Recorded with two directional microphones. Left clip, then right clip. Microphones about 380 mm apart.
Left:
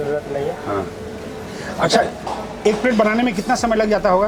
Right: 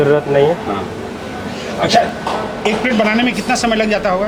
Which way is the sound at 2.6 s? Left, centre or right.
Left.